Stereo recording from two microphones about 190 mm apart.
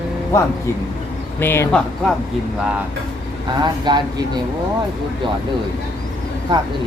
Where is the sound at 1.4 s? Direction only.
10° left (ahead or behind).